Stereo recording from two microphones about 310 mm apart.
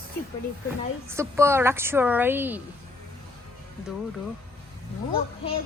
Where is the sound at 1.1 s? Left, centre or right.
Centre.